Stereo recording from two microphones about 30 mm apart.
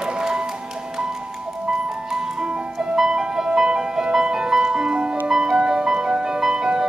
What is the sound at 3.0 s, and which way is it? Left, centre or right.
Music, right.